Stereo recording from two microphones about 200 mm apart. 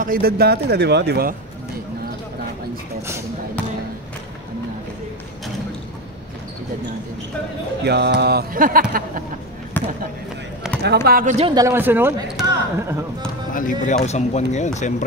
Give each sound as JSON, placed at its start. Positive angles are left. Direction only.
{"t": 0.0, "sound": "a man's voice", "side_deg": -45}
{"t": 7.8, "sound": "speech", "side_deg": -55}
{"t": 9.8, "sound": "basketball bounce", "side_deg": 10}
{"t": 10.8, "sound": "a man's voice", "side_deg": -55}
{"t": 11.3, "sound": "a man's voice", "side_deg": -25}
{"t": 11.6, "sound": "speech", "side_deg": -10}
{"t": 13.5, "sound": "speech", "side_deg": 40}